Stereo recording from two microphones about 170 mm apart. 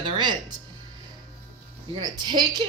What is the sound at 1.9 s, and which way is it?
Speech, 25° right (ahead or behind).